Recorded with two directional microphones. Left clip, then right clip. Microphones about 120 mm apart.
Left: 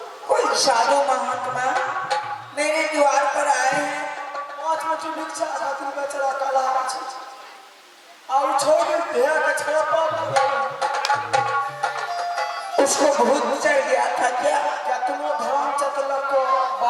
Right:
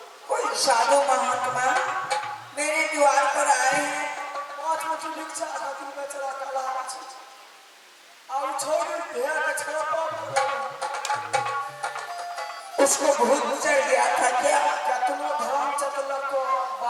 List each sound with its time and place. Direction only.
0.3 s music: 10° left (ahead or behind)
4.6 s a sound: 10° left (ahead or behind)
5.4 s speech: 35° left (ahead or behind)
8.4 s speech: 15° left (ahead or behind)
9.6 s speech: 30° left (ahead or behind)
10.3 s speech: 10° left (ahead or behind)
10.9 s music: 10° left (ahead or behind)
15.2 s speech: 10° left (ahead or behind)
15.6 s music: 10° left (ahead or behind)
15.9 s speech: 20° left (ahead or behind)